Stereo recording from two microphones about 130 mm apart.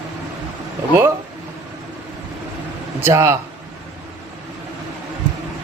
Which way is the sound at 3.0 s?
20° right (ahead or behind).